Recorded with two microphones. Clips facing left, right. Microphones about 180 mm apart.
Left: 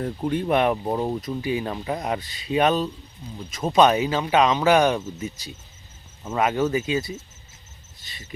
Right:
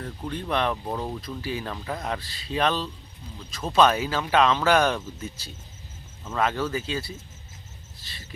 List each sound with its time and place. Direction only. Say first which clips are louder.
0.0 s speech: left 8 dB; 25° left (ahead or behind)